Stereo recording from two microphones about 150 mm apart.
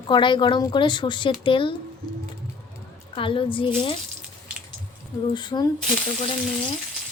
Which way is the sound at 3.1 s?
35° left (ahead or behind).